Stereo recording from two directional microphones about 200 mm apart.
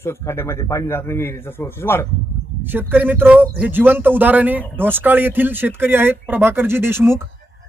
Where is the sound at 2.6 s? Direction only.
10° right (ahead or behind).